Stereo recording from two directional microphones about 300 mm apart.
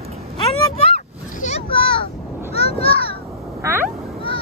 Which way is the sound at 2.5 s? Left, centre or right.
Centre.